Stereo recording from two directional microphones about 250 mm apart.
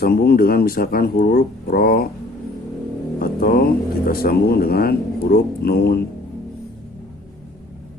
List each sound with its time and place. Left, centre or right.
0.0 s speech: left
3.2 s speech: left